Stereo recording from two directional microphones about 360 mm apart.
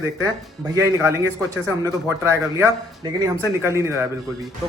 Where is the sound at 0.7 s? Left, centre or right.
Centre.